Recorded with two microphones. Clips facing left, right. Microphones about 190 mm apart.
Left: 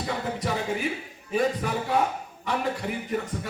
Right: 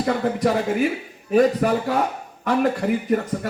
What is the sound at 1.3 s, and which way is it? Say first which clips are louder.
A man's voice: right 8 dB; 65° right (ahead or behind).